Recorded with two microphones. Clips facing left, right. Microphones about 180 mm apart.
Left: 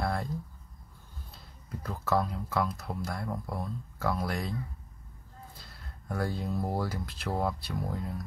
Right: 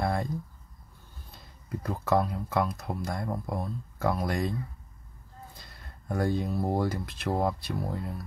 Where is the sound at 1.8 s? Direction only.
15° right (ahead or behind).